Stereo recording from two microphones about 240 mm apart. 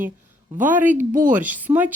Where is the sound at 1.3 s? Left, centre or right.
Centre.